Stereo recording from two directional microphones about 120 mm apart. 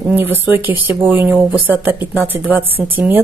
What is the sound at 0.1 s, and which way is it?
Speech, 15° right (ahead or behind).